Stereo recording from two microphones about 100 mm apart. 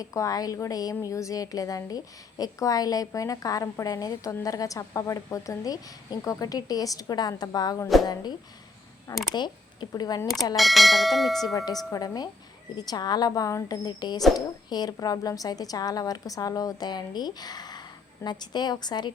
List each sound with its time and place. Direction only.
0.0 s a woman's voice: 35° left (ahead or behind)
10.5 s speech: centre (ahead or behind)
11.5 s a woman's voice: 40° left (ahead or behind)